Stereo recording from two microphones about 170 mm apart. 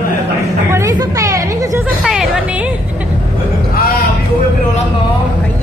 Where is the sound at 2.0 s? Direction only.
5° right (ahead or behind).